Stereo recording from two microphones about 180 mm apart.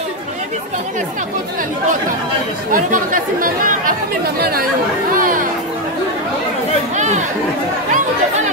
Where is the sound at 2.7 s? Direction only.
50° right (ahead or behind).